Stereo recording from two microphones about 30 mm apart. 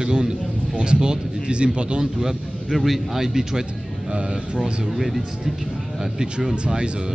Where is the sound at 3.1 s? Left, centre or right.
Centre.